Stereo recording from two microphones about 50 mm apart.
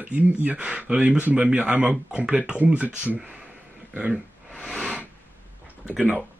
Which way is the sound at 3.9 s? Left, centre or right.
Right.